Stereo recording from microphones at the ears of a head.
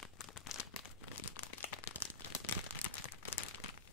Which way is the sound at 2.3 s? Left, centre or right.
Left.